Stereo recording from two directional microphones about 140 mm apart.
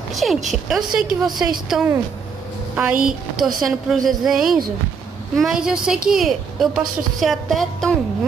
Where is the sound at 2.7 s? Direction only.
10° right (ahead or behind).